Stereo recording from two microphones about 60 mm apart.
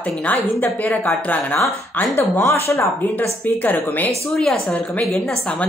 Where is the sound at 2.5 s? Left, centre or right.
Left.